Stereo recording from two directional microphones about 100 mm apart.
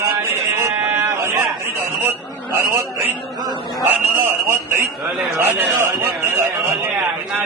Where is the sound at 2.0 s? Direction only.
25° right (ahead or behind).